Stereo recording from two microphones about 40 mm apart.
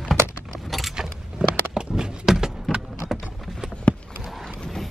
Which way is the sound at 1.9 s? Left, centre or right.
Centre.